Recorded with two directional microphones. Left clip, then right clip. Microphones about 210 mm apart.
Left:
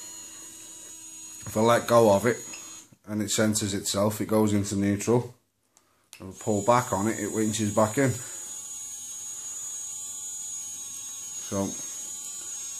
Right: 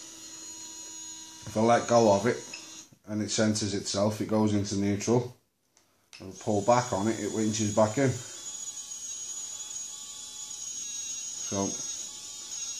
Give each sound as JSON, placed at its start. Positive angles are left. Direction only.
{"t": 1.5, "sound": "speech", "side_deg": 35}
{"t": 6.4, "sound": "speech", "side_deg": 35}
{"t": 11.4, "sound": "speech", "side_deg": 30}